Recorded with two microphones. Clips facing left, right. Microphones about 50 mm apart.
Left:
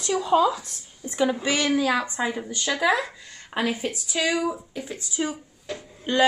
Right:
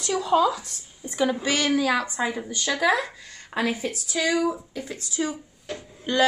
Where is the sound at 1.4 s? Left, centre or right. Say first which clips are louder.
Even; left.